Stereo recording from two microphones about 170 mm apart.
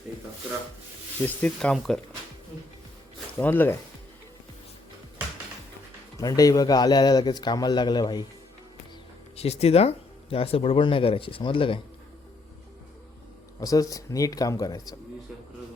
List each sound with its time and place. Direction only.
1.2 s speech: 5° left (ahead or behind)
3.3 s speech: 10° left (ahead or behind)
6.1 s a man's voice: 20° left (ahead or behind)
9.3 s speech: 40° left (ahead or behind)
13.6 s a man's voice: 20° left (ahead or behind)